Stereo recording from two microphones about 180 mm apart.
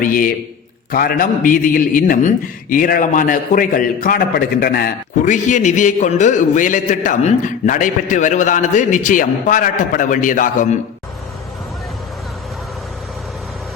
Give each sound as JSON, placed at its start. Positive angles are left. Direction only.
{"t": 0.0, "sound": "a man's voice", "side_deg": 50}